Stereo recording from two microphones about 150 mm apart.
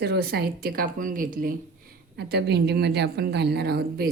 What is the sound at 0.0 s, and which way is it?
A woman's voice, 90° right.